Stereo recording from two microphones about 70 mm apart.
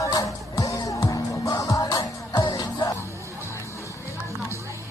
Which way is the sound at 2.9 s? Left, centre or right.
Left.